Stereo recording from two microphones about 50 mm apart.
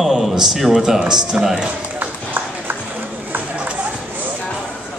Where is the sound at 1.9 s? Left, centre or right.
Right.